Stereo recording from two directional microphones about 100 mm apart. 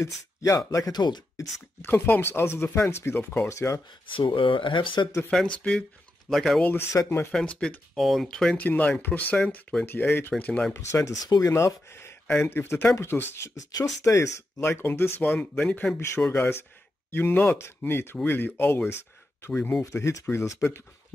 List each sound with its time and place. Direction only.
0.4 s speech: 35° left (ahead or behind)
1.3 s speech: 35° left (ahead or behind)
1.9 s speech: 20° left (ahead or behind)
4.1 s speech: 55° left (ahead or behind)
5.3 s speech: 10° left (ahead or behind)
6.6 s speech: 20° left (ahead or behind)
7.3 s speech: 5° left (ahead or behind)
10.7 s speech: 30° left (ahead or behind)
18.9 s a sound: 25° left (ahead or behind)
19.5 s speech: 10° left (ahead or behind)
19.8 s speech: 30° left (ahead or behind)